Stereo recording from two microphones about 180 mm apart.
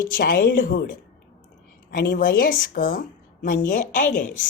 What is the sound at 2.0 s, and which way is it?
A woman's voice, 60° left (ahead or behind).